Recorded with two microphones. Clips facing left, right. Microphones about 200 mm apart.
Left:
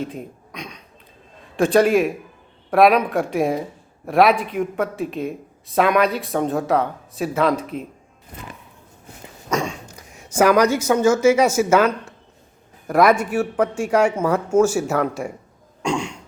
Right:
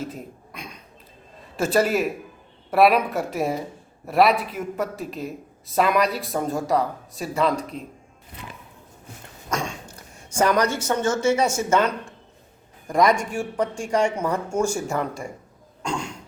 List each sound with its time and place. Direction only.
0.0 s speech: centre (ahead or behind)
8.3 s music: 45° left (ahead or behind)
9.5 s speech: 10° left (ahead or behind)
15.9 s a sound: 10° left (ahead or behind)